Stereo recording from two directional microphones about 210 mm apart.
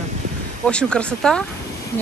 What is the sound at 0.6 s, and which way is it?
Speech, 5° left (ahead or behind).